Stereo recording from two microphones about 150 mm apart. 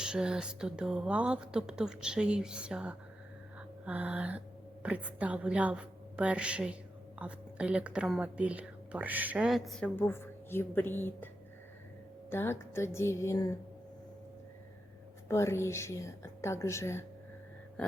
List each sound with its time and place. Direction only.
0.0 s a woman's voice: 5° right (ahead or behind)
9.9 s a woman's voice: 15° left (ahead or behind)
12.3 s a woman's voice: 15° left (ahead or behind)
15.3 s a woman's voice: 20° left (ahead or behind)
17.8 s a sound: 5° left (ahead or behind)